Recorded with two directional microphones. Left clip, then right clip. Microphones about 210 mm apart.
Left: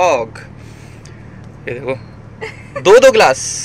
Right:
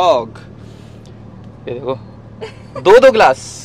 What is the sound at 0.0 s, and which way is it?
Speech, 5° right (ahead or behind).